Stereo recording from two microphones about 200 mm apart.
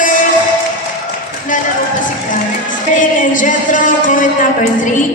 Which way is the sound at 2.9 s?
40° left (ahead or behind).